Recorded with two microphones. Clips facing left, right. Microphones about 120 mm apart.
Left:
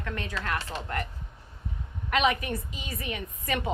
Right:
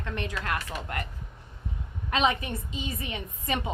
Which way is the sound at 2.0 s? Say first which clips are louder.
Left 1 dB; 25° right (ahead or behind).